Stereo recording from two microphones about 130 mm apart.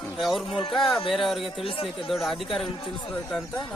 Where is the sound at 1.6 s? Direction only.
45° left (ahead or behind).